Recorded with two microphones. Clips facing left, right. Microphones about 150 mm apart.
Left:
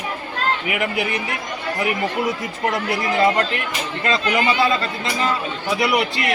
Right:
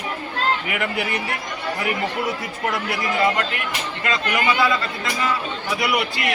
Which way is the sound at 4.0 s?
25° left (ahead or behind).